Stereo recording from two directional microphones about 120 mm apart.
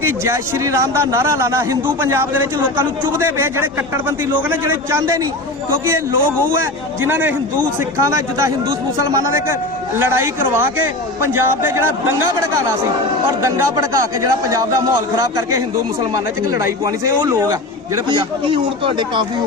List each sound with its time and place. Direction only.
0.0 s a man's voice: 25° right (ahead or behind)
13.4 s a man's voice: 25° right (ahead or behind)
16.5 s a man's voice: 25° right (ahead or behind)
18.1 s speech: 45° right (ahead or behind)